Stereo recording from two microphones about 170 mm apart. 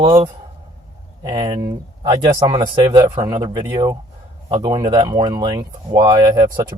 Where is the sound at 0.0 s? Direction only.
25° right (ahead or behind).